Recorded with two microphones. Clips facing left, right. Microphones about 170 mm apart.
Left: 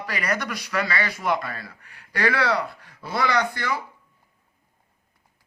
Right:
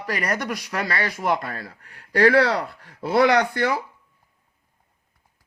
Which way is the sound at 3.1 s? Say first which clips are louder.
Right 6 dB; 60° right (ahead or behind).